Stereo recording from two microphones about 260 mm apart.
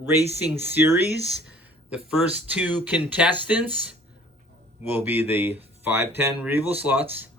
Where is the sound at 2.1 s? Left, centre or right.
Centre.